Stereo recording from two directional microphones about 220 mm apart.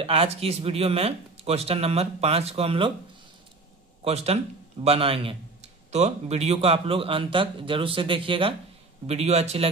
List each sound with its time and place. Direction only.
0.0 s a man's voice: 25° right (ahead or behind)
4.0 s a man's voice: 30° right (ahead or behind)